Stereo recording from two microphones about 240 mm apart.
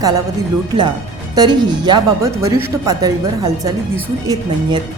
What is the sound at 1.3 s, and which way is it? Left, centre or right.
Speech, centre.